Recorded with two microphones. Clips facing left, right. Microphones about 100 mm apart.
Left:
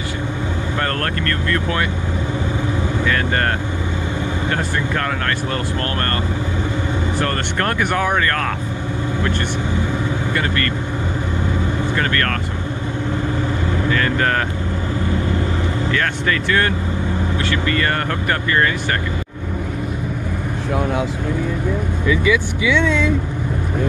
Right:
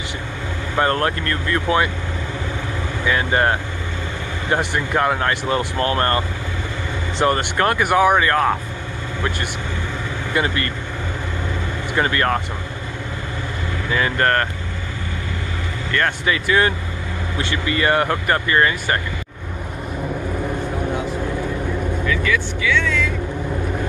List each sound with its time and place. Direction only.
0.7 s speech: 15° right (ahead or behind)
3.1 s speech: 10° right (ahead or behind)
10.3 s speech: 15° right (ahead or behind)
11.9 s speech: 15° right (ahead or behind)
14.1 s speech: centre (ahead or behind)
15.9 s speech: 5° right (ahead or behind)
22.0 s speech: 15° left (ahead or behind)